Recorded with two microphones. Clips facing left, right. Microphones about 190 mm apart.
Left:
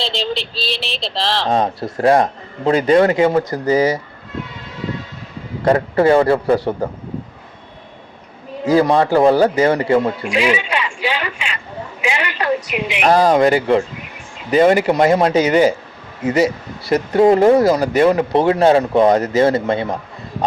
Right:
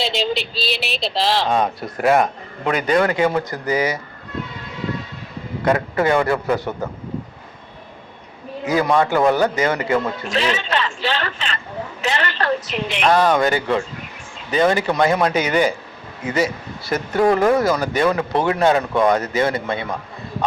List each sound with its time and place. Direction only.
0.0 s speech: 5° right (ahead or behind)
1.6 s speech: 30° left (ahead or behind)
5.6 s speech: 35° left (ahead or behind)
8.6 s speech: 35° left (ahead or behind)
10.2 s a man's voice: 10° left (ahead or behind)
13.0 s speech: 35° left (ahead or behind)